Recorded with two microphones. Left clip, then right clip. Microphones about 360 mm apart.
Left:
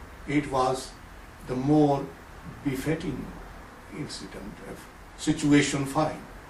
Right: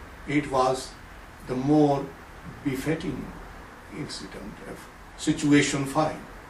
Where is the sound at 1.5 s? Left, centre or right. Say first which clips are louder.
Right 1 dB; right.